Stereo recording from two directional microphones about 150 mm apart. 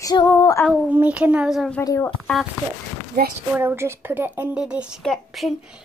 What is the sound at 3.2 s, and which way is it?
Speech, 90° right.